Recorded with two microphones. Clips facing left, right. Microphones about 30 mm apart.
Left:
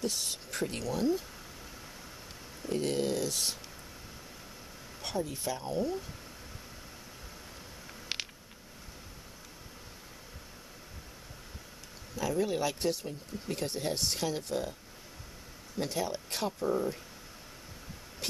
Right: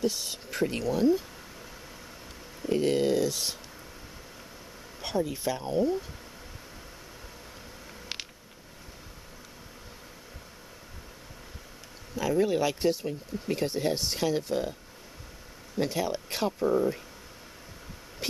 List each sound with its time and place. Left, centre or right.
0.0 s speech: centre
2.6 s speech: centre
5.3 s speech: centre
8.1 s a sound: centre
12.2 s speech: centre
15.8 s speech: centre